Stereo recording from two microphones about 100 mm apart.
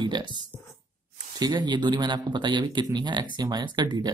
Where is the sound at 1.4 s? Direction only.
50° right (ahead or behind).